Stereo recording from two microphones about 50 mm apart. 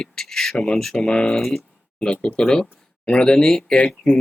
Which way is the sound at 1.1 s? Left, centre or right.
Centre.